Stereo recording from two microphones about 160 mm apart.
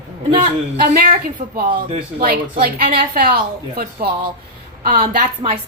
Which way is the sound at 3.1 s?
70° right (ahead or behind).